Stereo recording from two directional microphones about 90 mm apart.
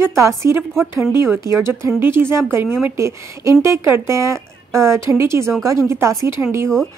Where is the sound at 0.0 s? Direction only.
30° right (ahead or behind).